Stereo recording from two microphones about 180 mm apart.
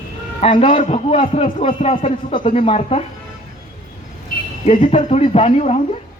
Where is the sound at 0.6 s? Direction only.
30° left (ahead or behind).